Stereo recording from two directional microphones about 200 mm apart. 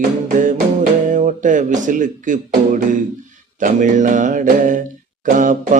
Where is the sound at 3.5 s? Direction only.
40° right (ahead or behind).